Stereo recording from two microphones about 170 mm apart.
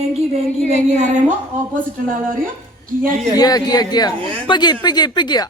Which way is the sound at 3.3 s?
20° left (ahead or behind).